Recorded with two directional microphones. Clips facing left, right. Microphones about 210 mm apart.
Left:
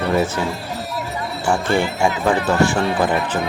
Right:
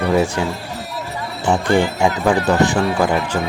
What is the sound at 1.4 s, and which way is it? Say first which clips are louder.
Speech: right 3 dB; 20° right (ahead or behind).